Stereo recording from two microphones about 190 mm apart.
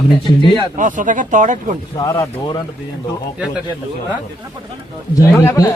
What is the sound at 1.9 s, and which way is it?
Speech, 15° left (ahead or behind).